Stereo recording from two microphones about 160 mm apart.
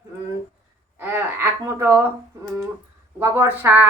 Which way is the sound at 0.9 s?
15° right (ahead or behind).